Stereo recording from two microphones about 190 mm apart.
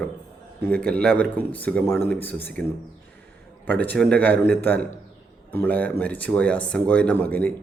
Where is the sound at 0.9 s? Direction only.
5° left (ahead or behind).